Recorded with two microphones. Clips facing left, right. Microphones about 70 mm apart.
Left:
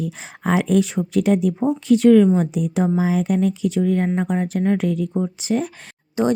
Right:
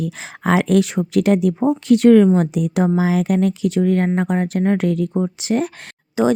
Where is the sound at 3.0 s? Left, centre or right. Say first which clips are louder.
Right 2 dB; right.